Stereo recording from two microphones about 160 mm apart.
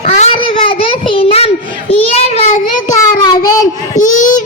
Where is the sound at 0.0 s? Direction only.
45° left (ahead or behind).